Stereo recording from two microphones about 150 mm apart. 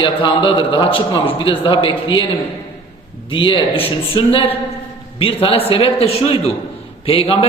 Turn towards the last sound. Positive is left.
turn(degrees=40)  # may be behind; listen again after turning